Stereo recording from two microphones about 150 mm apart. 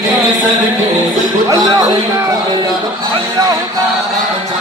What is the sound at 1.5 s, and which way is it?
Speech, 25° right (ahead or behind).